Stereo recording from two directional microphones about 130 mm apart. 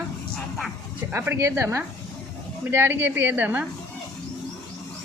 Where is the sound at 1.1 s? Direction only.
20° right (ahead or behind).